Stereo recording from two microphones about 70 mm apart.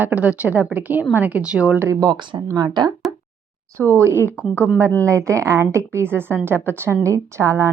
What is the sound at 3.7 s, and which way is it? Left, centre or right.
Speech, right.